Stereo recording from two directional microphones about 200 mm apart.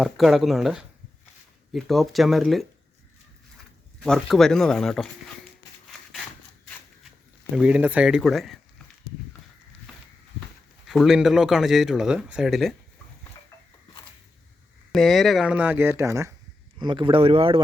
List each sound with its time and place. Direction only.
0.0 s speech: centre (ahead or behind)
4.0 s speech: 5° left (ahead or behind)
7.5 s speech: 5° right (ahead or behind)
10.8 s speech: centre (ahead or behind)
14.9 s speech: centre (ahead or behind); by 17.6 s 30° right (ahead or behind)